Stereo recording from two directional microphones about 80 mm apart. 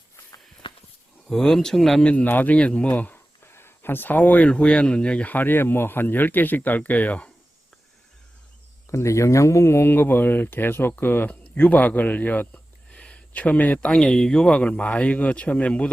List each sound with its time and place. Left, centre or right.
0.6 s a sound: left
1.3 s speech: centre
2.0 s speech: centre
3.4 s speech: left
8.9 s speech: left; by 15.9 s centre